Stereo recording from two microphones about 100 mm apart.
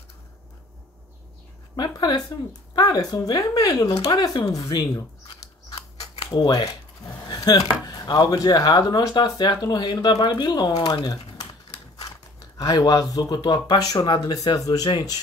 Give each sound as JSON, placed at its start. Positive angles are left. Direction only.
{"t": 1.8, "sound": "speech", "side_deg": 45}
{"t": 4.5, "sound": "scissors", "side_deg": 35}
{"t": 7.2, "sound": "speech", "side_deg": 40}